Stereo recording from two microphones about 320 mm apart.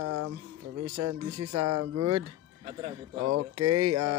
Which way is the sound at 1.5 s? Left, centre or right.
Right.